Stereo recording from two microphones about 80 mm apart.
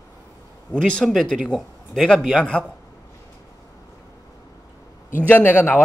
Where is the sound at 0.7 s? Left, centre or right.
Centre.